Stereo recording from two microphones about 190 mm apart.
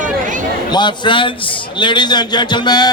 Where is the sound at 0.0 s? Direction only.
45° right (ahead or behind).